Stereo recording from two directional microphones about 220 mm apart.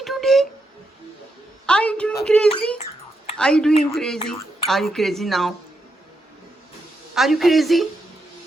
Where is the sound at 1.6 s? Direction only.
5° left (ahead or behind).